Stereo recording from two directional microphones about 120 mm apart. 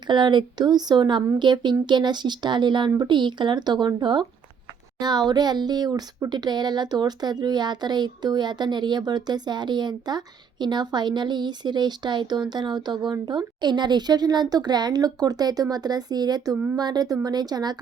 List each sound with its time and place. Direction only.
0.1 s speech: 40° right (ahead or behind)